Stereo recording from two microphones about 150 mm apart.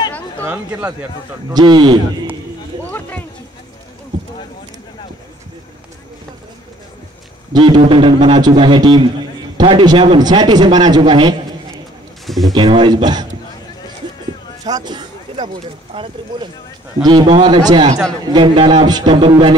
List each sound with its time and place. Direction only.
0.5 s speech: 15° right (ahead or behind)
1.5 s a man's voice: 30° right (ahead or behind)
2.8 s a sound: 10° left (ahead or behind)
7.5 s a man's voice: 30° right (ahead or behind)
12.3 s speech: centre (ahead or behind)
12.5 s a man's voice: 35° right (ahead or behind)
14.6 s a man's voice: 25° right (ahead or behind)